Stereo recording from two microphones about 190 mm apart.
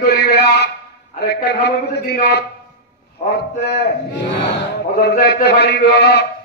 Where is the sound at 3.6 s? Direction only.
60° left (ahead or behind).